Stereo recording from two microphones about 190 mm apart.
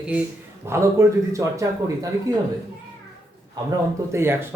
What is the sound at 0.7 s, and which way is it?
A man's voice, 15° right (ahead or behind).